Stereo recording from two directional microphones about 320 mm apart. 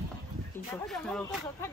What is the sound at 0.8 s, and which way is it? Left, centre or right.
Speech, centre.